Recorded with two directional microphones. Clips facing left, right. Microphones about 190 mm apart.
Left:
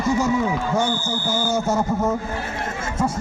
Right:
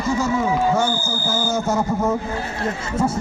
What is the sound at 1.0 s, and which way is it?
Speech, 5° right (ahead or behind).